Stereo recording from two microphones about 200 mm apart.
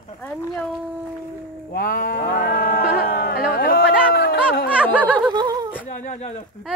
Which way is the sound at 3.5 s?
50° left (ahead or behind).